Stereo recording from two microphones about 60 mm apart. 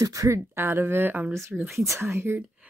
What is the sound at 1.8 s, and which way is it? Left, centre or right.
Speech, right.